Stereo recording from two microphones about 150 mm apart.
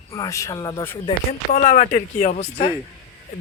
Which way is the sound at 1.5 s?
60° left (ahead or behind).